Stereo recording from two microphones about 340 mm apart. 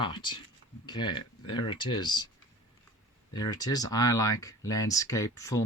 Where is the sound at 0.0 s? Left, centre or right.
Centre.